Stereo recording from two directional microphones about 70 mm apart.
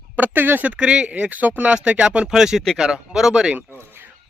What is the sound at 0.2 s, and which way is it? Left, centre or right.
Speech, right.